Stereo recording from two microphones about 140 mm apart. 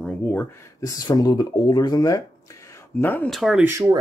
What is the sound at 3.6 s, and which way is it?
Speech, 20° right (ahead or behind).